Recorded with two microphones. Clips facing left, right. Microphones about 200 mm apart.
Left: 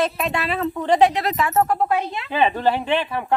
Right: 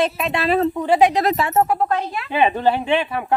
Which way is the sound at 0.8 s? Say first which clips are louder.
Left 1 dB; 10° right (ahead or behind).